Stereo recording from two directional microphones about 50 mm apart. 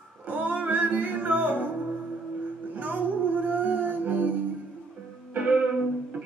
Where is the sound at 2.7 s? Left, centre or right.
Right.